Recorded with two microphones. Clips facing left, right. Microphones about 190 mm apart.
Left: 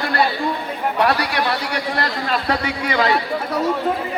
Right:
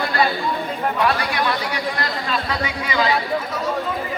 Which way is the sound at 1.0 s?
65° left (ahead or behind).